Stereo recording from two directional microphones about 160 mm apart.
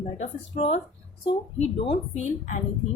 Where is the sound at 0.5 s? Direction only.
35° left (ahead or behind).